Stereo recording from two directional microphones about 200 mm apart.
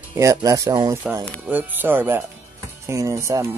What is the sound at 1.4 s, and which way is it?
Speech, 10° right (ahead or behind).